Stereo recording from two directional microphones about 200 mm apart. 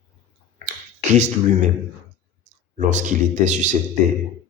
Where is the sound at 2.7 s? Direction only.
40° right (ahead or behind).